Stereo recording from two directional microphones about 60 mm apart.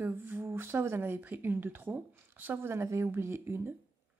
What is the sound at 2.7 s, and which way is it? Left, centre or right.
Speech, right.